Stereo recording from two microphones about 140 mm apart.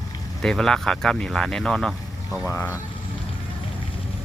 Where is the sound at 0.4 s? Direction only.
5° left (ahead or behind).